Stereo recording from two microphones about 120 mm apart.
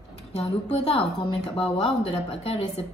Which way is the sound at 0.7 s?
60° left (ahead or behind).